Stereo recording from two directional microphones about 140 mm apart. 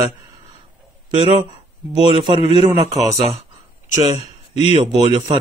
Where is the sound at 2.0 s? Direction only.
35° right (ahead or behind).